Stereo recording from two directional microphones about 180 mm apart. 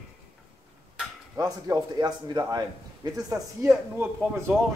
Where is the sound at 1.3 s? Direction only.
20° right (ahead or behind).